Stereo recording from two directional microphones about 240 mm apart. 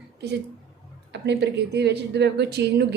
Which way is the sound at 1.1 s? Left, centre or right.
Right.